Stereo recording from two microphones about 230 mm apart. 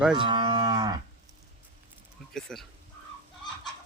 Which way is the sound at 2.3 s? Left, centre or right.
Centre.